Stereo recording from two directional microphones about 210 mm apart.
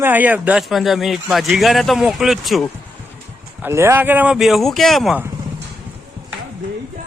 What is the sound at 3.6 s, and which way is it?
Speech, 15° right (ahead or behind).